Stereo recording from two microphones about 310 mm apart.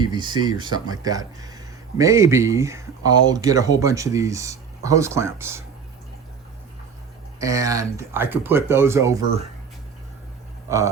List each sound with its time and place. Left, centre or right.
0.0 s speech: centre
7.3 s speech: centre